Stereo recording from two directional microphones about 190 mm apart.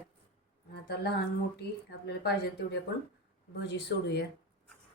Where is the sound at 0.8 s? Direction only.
60° left (ahead or behind).